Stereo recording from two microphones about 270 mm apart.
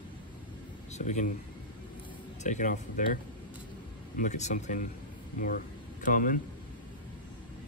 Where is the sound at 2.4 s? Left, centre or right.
Left.